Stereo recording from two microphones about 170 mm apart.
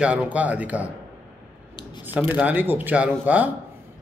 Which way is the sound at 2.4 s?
10° right (ahead or behind).